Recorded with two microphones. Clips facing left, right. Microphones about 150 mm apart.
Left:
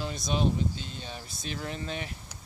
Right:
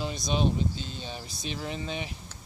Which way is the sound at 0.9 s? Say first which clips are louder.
Right 2 dB; 25° right (ahead or behind).